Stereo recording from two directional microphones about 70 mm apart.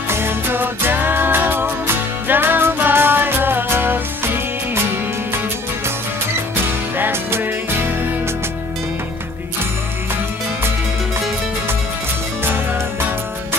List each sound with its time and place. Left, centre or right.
0.1 s music: right
7.0 s music: right